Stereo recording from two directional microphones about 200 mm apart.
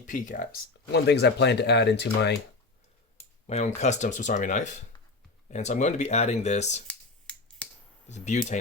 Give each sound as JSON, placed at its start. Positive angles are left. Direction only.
{"t": 0.0, "sound": "speech", "side_deg": 40}
{"t": 3.4, "sound": "speech", "side_deg": 35}
{"t": 6.8, "sound": "finger snapping", "side_deg": 5}
{"t": 8.0, "sound": "speech", "side_deg": 35}